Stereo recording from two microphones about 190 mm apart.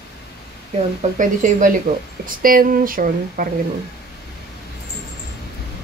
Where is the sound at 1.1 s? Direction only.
45° right (ahead or behind).